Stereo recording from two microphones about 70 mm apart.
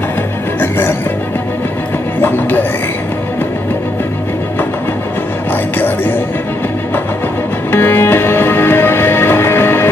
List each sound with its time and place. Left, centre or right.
0.6 s music: left
2.2 s music: left
5.5 s music: left
7.7 s music: left